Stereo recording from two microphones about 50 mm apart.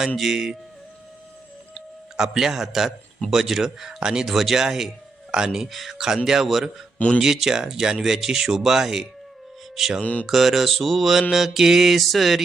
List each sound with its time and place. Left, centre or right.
0.2 s speech: centre
2.1 s speech: centre
6.2 s mantra: centre
7.2 s speech: centre
10.0 s speech: left
10.2 s mantra: centre